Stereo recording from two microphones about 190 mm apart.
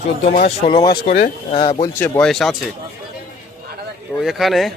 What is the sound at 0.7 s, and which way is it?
Speech, 25° left (ahead or behind).